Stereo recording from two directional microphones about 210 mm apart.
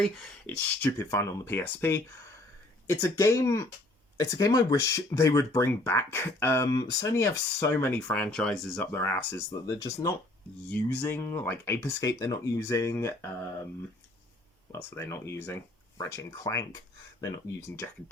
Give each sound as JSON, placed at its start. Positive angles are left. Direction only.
{"t": 0.0, "sound": "speech", "side_deg": 0}
{"t": 14.7, "sound": "speech", "side_deg": 10}